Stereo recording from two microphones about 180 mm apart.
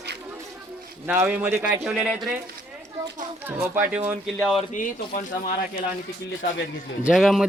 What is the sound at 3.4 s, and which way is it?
Speech, 15° right (ahead or behind).